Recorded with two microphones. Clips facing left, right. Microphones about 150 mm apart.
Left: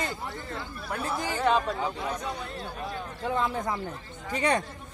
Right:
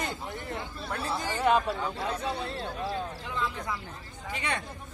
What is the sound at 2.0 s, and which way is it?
Speech, 30° right (ahead or behind).